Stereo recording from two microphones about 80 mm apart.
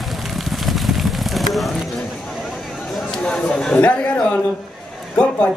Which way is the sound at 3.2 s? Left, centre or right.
Centre.